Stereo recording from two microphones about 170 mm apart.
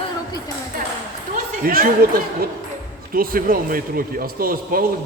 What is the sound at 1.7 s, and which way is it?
A man's voice, 60° right (ahead or behind).